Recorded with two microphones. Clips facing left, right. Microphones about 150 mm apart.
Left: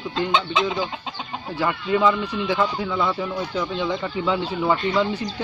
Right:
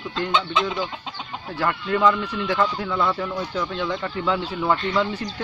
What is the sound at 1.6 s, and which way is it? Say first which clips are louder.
Speech: left 1 dB; 10° left (ahead or behind).